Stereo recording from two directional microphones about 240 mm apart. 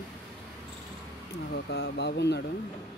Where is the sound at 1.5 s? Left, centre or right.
Left.